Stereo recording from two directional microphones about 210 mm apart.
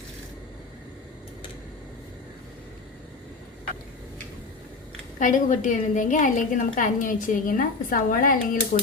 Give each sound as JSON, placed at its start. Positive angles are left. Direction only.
{"t": 5.2, "sound": "a woman's voice", "side_deg": 35}